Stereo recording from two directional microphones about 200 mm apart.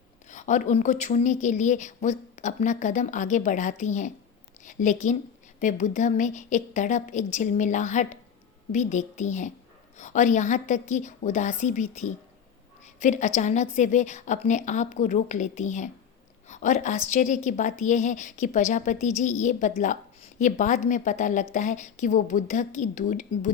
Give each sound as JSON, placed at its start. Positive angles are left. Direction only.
{"t": 0.3, "sound": "a woman's voice", "side_deg": 35}